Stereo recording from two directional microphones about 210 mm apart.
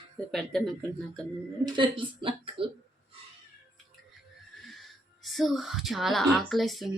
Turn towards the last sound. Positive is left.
turn(degrees=0)  # may be behind; listen again after turning